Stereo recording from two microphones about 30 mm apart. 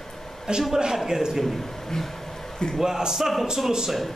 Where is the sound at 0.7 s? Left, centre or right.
Right.